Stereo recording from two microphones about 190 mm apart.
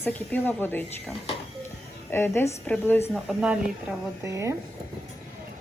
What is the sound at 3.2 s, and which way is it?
Speech, 5° right (ahead or behind).